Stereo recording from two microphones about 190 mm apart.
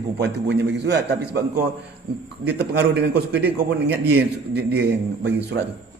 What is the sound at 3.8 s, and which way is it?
Speech, 10° right (ahead or behind).